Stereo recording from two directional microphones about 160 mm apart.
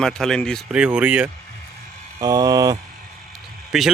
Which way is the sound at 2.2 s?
25° right (ahead or behind).